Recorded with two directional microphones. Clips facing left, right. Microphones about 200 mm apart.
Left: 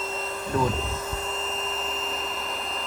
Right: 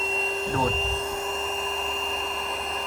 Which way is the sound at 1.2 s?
Centre (ahead or behind).